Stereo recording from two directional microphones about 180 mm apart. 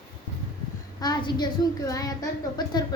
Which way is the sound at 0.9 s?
25° left (ahead or behind).